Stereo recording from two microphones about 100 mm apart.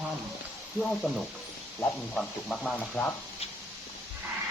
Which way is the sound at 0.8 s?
10° left (ahead or behind).